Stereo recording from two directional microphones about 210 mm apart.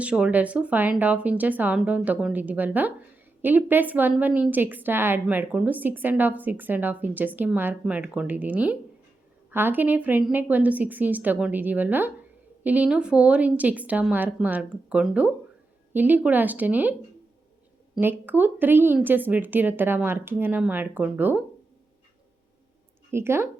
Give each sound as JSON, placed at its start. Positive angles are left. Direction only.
{"t": 0.0, "sound": "a woman's voice", "side_deg": -5}
{"t": 17.9, "sound": "a woman's voice", "side_deg": -10}
{"t": 23.1, "sound": "a woman's voice", "side_deg": -10}